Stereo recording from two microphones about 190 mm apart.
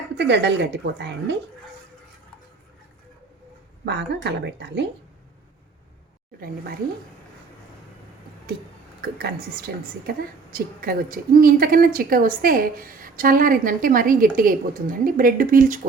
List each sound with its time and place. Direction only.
0.2 s a woman's voice: 65° right (ahead or behind)
3.8 s a woman's voice: 65° right (ahead or behind)
9.0 s a woman's voice: 55° right (ahead or behind)